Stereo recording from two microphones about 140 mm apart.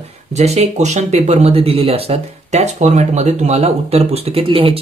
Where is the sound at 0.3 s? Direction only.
50° right (ahead or behind).